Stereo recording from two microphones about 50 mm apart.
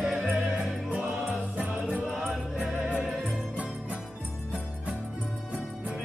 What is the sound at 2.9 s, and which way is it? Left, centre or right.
Music, centre.